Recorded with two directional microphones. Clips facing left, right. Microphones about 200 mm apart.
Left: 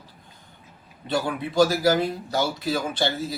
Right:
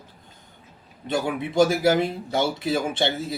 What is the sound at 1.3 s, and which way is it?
Speech, 25° right (ahead or behind).